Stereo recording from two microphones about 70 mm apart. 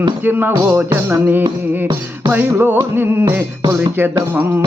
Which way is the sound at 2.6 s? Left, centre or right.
Right.